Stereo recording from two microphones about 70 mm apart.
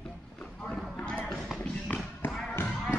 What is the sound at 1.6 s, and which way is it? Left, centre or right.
Tap, left.